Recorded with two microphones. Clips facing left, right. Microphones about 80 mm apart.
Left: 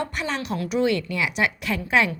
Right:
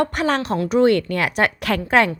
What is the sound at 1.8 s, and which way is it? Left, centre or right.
Speech, right.